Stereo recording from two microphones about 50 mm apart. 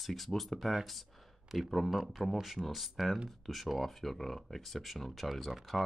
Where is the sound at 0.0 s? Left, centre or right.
Centre.